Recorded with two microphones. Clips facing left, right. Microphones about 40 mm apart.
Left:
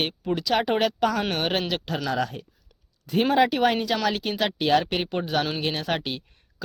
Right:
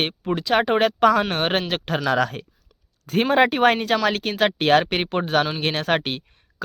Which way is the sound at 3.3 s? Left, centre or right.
Right.